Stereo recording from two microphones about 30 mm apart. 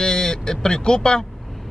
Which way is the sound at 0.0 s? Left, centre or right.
Left.